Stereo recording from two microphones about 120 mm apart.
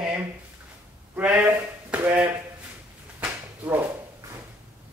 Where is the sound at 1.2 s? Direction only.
10° right (ahead or behind).